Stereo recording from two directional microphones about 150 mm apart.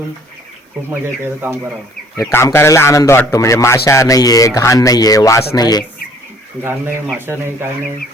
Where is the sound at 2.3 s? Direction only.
15° left (ahead or behind).